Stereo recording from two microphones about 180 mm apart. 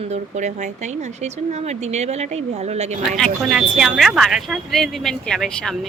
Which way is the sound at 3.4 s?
Centre (ahead or behind).